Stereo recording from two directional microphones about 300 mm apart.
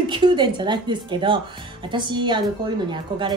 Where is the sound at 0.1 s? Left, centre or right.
Centre.